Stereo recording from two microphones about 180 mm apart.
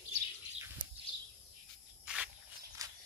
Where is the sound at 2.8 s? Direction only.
15° right (ahead or behind).